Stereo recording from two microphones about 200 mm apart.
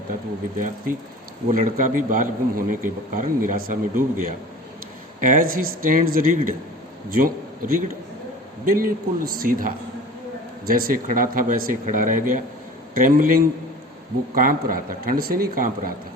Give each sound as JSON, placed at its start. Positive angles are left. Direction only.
{"t": 1.5, "sound": "a man's voice", "side_deg": -40}